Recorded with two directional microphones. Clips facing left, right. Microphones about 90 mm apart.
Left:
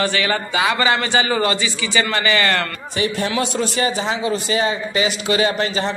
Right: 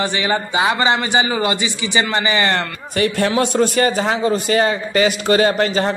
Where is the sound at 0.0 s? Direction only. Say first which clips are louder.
Right 1 dB; 20° right (ahead or behind).